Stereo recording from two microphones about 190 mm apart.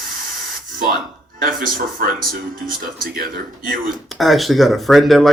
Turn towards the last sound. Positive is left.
turn(degrees=0)  # may be behind; listen again after turning